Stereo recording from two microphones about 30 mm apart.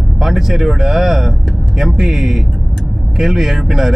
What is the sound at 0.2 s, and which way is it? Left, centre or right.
Speech, centre.